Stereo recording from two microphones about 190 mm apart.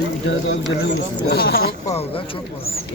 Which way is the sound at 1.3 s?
55° left (ahead or behind).